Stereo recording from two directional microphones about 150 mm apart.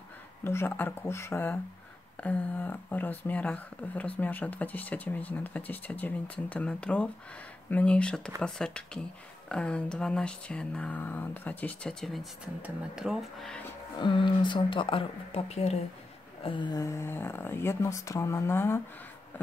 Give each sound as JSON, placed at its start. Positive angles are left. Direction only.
{"t": 0.4, "sound": "speech", "side_deg": 15}
{"t": 13.9, "sound": "speech", "side_deg": 30}
{"t": 16.4, "sound": "speech", "side_deg": 30}